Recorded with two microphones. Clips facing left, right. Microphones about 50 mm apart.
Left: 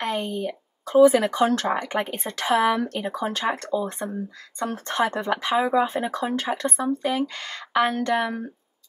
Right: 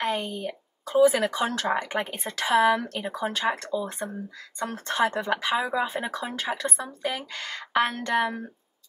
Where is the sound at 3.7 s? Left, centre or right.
Left.